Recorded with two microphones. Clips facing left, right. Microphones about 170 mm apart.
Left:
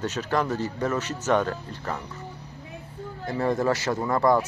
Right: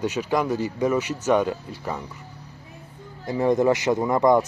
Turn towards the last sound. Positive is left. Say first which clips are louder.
# right 3 dB
turn(degrees=-20)  # may be behind; listen again after turning